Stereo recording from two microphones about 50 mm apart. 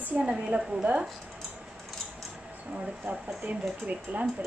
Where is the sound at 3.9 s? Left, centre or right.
Right.